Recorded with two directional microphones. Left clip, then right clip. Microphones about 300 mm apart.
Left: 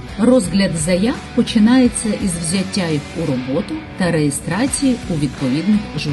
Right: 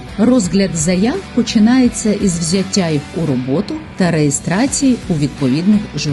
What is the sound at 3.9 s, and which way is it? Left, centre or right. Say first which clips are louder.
Speech: right 2 dB; right.